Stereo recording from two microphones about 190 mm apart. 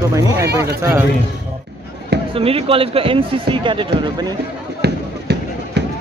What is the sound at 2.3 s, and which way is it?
Speech, 30° right (ahead or behind).